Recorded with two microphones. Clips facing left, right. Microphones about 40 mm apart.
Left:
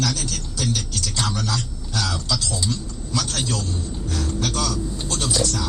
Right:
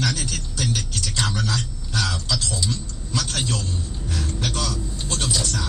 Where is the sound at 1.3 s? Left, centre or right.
Right.